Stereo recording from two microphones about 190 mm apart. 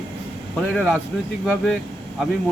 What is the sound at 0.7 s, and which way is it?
Speech, centre (ahead or behind).